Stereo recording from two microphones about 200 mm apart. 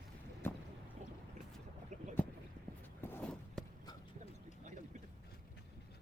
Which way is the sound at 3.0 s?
5° left (ahead or behind).